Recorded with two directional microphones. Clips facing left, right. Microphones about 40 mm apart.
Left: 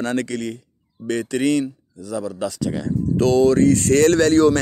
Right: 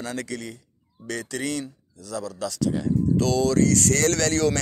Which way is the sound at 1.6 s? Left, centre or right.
Left.